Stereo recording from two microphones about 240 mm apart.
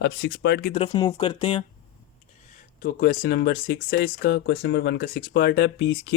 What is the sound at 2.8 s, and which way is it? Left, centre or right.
Speech, left.